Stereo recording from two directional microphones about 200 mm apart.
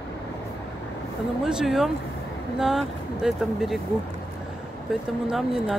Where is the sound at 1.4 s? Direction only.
Centre (ahead or behind).